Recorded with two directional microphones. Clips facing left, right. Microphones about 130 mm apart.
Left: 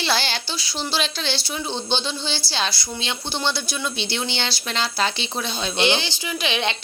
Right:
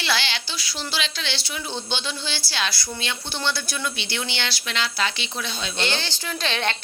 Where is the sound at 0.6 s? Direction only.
30° left (ahead or behind).